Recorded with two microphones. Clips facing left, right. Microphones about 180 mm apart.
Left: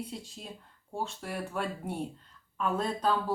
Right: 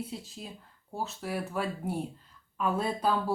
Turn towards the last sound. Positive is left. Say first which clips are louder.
# right 1 dB
turn(degrees=-10)  # may be behind; listen again after turning